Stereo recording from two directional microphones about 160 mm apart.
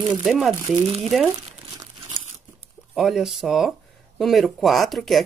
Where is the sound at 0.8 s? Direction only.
30° right (ahead or behind).